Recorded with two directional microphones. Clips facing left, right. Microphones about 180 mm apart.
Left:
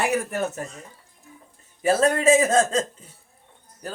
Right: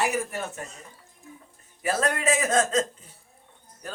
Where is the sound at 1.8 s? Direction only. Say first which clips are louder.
Left 6 dB; 25° left (ahead or behind).